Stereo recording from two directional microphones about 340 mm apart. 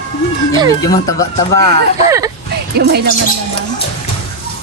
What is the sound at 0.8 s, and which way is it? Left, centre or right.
Speech, centre.